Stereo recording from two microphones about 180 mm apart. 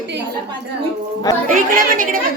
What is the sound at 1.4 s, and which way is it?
Speech, 50° right (ahead or behind).